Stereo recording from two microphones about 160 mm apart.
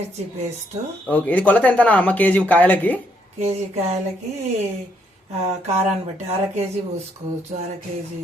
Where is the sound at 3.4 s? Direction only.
40° right (ahead or behind).